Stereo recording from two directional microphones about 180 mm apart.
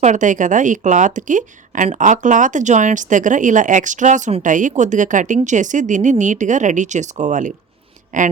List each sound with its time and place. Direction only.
0.0 s speech: 45° right (ahead or behind)